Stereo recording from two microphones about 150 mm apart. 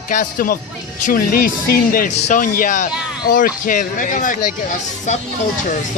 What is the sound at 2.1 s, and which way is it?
Speech, 55° left (ahead or behind).